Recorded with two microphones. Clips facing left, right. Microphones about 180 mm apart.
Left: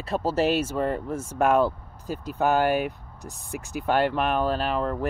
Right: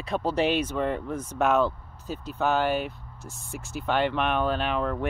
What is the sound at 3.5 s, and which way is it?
Speech, 60° left (ahead or behind).